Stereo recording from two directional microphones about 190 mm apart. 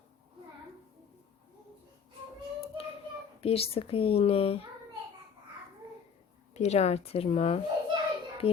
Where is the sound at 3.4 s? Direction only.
30° left (ahead or behind).